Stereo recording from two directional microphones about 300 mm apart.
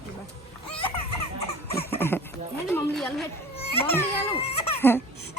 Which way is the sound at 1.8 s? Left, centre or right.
Centre.